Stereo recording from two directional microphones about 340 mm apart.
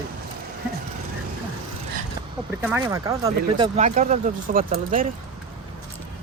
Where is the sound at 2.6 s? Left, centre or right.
Centre; by 5.1 s right.